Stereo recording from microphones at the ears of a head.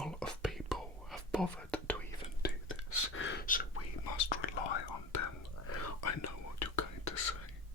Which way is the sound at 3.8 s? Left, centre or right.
Left.